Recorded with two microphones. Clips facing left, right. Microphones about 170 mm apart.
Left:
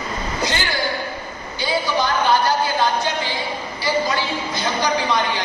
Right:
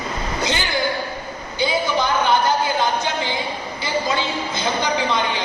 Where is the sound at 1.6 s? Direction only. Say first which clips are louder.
Right 1 dB; 20° right (ahead or behind).